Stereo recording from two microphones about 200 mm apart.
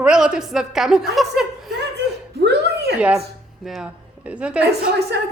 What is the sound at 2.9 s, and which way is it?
A woman's voice, 5° right (ahead or behind).